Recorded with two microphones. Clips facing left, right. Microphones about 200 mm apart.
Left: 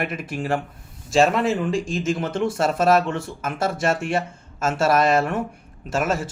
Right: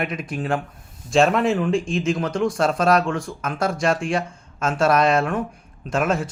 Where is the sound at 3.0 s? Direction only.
25° left (ahead or behind).